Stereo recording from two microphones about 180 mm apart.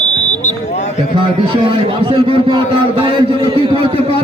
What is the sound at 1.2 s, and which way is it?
A man's voice, 30° right (ahead or behind).